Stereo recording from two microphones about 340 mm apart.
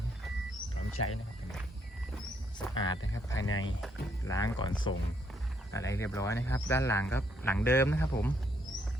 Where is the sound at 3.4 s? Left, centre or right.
Left.